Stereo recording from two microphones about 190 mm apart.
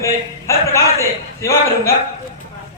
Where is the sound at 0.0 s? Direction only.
15° left (ahead or behind).